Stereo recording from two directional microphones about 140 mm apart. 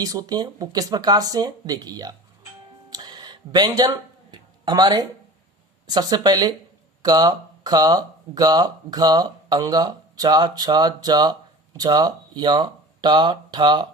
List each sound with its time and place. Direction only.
0.0 s speech: 25° right (ahead or behind)
2.9 s a sound: 30° right (ahead or behind)
5.9 s speech: 30° right (ahead or behind)